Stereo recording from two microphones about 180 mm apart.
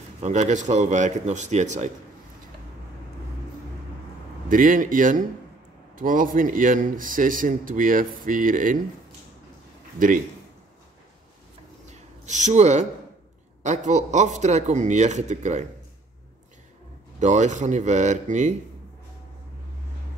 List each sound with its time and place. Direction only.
0.2 s speech: 40° right (ahead or behind)
4.5 s a man's voice: 50° right (ahead or behind)
9.9 s a man's voice: 45° right (ahead or behind)
11.8 s a sound: 40° right (ahead or behind)
13.6 s speech: 40° right (ahead or behind)
17.2 s speech: 40° right (ahead or behind)